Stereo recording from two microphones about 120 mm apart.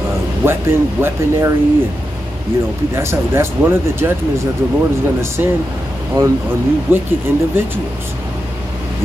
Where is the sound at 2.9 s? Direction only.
20° right (ahead or behind).